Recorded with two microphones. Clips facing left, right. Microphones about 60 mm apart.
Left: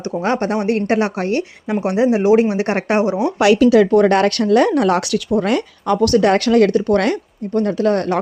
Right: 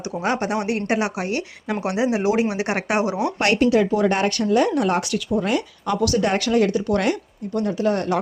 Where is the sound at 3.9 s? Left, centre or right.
Left.